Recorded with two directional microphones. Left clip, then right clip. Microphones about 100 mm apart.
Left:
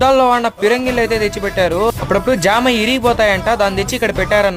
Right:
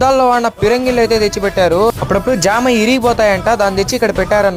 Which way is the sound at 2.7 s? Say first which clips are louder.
Right 3 dB; 65° left (ahead or behind).